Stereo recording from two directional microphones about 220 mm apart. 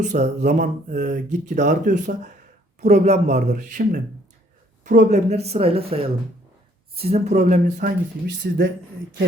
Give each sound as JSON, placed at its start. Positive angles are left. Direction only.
{"t": 0.0, "sound": "speech", "side_deg": -30}